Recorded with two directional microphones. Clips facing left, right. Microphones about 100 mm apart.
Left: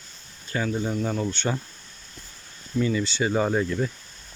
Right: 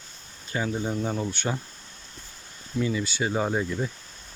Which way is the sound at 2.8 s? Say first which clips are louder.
Left 2 dB; 10° right (ahead or behind).